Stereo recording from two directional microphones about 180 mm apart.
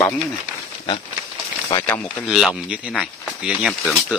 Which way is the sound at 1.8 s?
10° left (ahead or behind).